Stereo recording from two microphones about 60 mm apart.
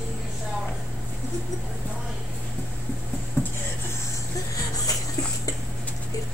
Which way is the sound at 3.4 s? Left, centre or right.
Left.